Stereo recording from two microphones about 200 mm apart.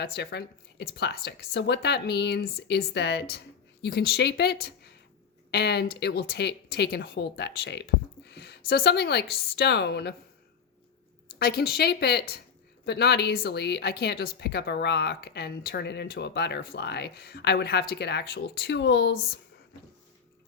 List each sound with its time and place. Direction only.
0.0 s a woman's voice: 55° left (ahead or behind)
11.3 s a woman's voice: 50° left (ahead or behind)